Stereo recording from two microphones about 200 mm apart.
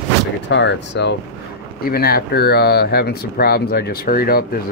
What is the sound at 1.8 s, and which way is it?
Speech, 50° left (ahead or behind).